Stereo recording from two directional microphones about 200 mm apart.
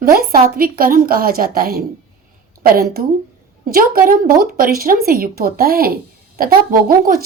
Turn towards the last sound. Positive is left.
turn(degrees=-45)  # may be behind; listen again after turning